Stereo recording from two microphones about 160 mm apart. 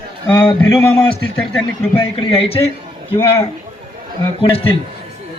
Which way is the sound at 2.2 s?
35° left (ahead or behind).